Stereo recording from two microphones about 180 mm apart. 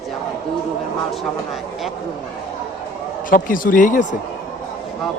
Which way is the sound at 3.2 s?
50° left (ahead or behind).